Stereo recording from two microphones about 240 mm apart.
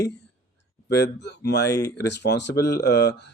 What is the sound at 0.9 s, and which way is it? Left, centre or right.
Speech, left.